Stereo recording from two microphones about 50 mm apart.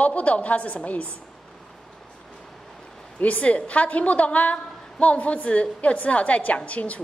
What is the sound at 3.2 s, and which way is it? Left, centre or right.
A woman's voice, left.